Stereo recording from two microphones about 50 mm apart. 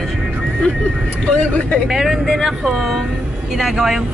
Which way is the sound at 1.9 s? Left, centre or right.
Centre.